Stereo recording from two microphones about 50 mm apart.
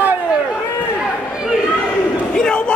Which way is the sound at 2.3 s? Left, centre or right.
Centre.